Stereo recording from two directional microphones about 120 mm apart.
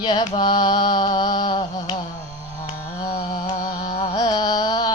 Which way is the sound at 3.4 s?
50° left (ahead or behind).